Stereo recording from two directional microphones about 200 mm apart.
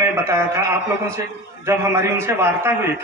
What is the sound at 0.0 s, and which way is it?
A man's voice, 15° right (ahead or behind).